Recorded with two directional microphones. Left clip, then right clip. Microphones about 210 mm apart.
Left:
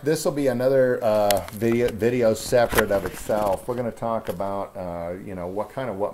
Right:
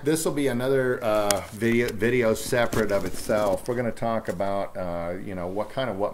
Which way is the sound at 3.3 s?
5° right (ahead or behind).